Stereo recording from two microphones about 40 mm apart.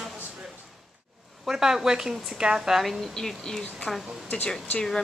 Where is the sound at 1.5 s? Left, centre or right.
Centre.